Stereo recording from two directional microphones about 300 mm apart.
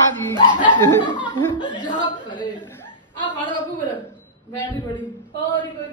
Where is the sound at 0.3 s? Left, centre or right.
Centre.